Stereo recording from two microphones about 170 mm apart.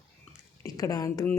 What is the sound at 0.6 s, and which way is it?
Speech, 20° left (ahead or behind).